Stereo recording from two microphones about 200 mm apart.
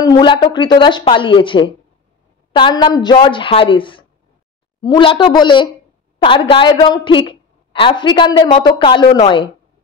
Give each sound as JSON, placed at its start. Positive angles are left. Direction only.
{"t": 0.0, "sound": "a woman's voice", "side_deg": 20}